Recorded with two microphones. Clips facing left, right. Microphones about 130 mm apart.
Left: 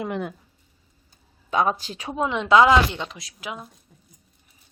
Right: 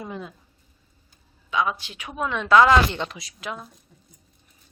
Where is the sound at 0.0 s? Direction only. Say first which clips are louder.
Left 6 dB; 70° left (ahead or behind).